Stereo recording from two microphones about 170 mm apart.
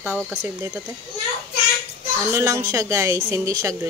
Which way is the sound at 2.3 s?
20° right (ahead or behind).